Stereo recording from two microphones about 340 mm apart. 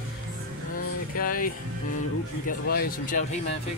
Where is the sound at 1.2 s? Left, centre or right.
Left.